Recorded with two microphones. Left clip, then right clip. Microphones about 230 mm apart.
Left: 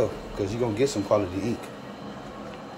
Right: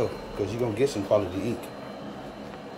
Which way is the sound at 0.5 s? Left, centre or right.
Centre.